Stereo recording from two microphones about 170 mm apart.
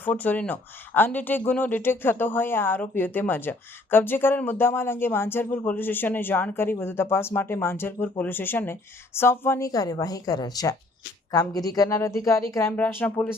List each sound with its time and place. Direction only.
0.0 s a woman's voice: 10° left (ahead or behind)